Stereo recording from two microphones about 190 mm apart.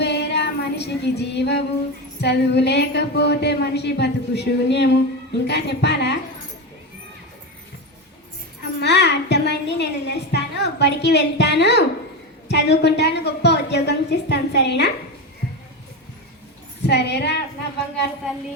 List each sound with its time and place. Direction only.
0.0 s female singing: 60° left (ahead or behind)
2.2 s a woman's voice: 60° left (ahead or behind)
8.8 s a sound: 65° left (ahead or behind)
12.5 s a woman's voice: 60° left (ahead or behind)
16.8 s a woman's voice: 60° left (ahead or behind)